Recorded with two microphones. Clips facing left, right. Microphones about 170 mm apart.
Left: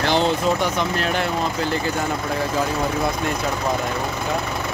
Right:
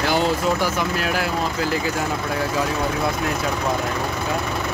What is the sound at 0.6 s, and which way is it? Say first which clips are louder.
Speech: left 1 dB; 5° right (ahead or behind).